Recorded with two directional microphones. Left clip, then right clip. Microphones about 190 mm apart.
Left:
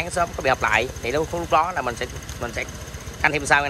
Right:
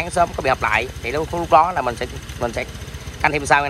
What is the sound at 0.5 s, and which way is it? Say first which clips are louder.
Speech: right 1 dB; 10° left (ahead or behind).